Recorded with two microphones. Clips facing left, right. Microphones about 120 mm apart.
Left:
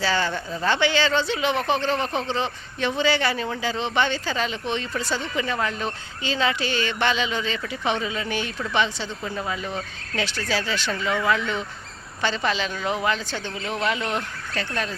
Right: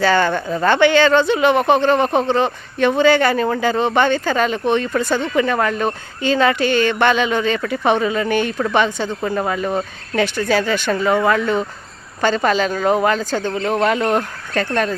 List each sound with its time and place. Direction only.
0.0 s speech: 55° right (ahead or behind)